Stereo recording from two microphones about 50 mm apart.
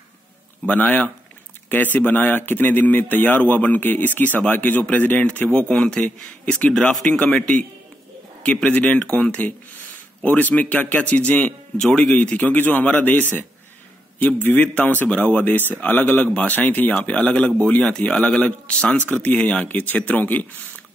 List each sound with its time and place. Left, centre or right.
0.7 s a man's voice: left
5.6 s speech: centre
6.7 s speech: centre
8.6 s a man's voice: left
11.8 s speech: centre
12.2 s a man's voice: left